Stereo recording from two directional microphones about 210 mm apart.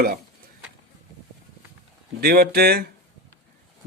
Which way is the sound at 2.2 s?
50° right (ahead or behind).